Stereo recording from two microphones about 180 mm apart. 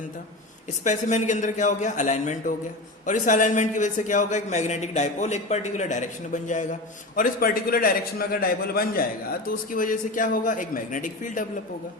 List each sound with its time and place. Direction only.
0.9 s a man's voice: 40° left (ahead or behind)